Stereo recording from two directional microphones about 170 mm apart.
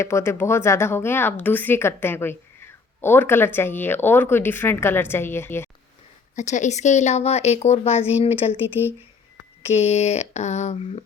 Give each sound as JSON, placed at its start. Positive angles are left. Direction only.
{"t": 0.0, "sound": "a woman's voice", "side_deg": 15}
{"t": 6.3, "sound": "speech", "side_deg": 45}
{"t": 9.6, "sound": "speech", "side_deg": 40}